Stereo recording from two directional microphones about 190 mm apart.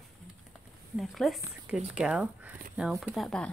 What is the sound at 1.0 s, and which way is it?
Speech, centre (ahead or behind).